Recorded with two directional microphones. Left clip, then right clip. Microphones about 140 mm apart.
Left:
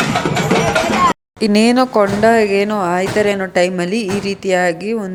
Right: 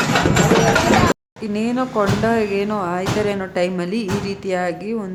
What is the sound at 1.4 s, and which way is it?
Speech, 55° left (ahead or behind).